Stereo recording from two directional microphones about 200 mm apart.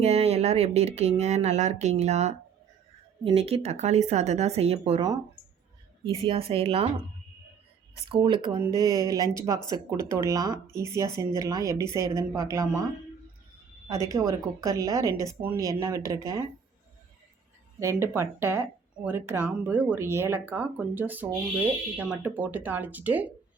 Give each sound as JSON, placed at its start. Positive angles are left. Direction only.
{"t": 0.0, "sound": "speech", "side_deg": -30}
{"t": 6.2, "sound": "a woman's voice", "side_deg": -25}
{"t": 8.1, "sound": "a woman's voice", "side_deg": -25}
{"t": 13.8, "sound": "speech", "side_deg": -15}
{"t": 17.7, "sound": "speech", "side_deg": -15}